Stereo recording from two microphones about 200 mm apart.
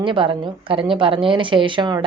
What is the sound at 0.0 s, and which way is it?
Speech, 25° right (ahead or behind).